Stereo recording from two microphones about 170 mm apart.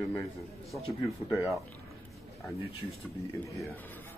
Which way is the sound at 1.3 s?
Centre (ahead or behind).